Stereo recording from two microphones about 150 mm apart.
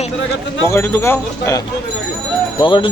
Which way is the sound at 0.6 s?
15° left (ahead or behind).